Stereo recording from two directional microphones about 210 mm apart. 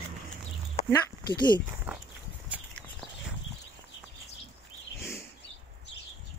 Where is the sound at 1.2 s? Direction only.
20° left (ahead or behind).